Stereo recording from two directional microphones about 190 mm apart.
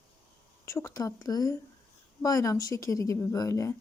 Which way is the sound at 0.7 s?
15° left (ahead or behind).